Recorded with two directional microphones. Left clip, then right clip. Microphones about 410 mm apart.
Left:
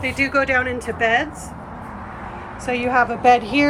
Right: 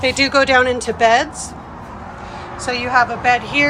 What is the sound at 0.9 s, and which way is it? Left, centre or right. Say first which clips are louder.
Speech: right 5 dB; right.